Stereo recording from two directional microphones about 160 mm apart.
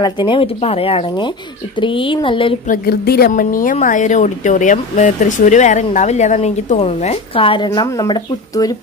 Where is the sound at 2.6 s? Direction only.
65° left (ahead or behind).